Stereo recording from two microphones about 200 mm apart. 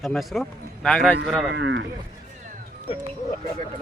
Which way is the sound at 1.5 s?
60° right (ahead or behind).